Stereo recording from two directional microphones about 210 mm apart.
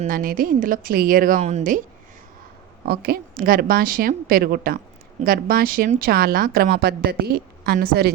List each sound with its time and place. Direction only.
0.0 s a woman's voice: 40° right (ahead or behind)
2.8 s a woman's voice: 50° right (ahead or behind)